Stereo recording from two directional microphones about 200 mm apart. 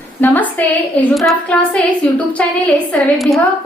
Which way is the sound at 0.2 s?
10° left (ahead or behind).